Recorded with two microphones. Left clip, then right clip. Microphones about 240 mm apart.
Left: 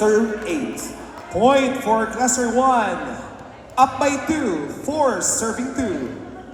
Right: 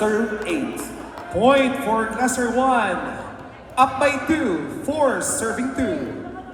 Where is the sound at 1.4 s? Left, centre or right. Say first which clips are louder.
Left 1 dB; left.